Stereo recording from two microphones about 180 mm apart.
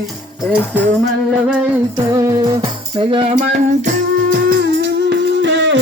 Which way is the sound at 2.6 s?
25° right (ahead or behind).